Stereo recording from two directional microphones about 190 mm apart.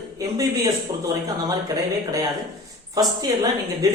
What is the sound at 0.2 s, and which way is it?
Speech, 20° right (ahead or behind).